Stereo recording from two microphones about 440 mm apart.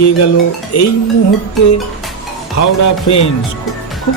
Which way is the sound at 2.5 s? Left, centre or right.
Left.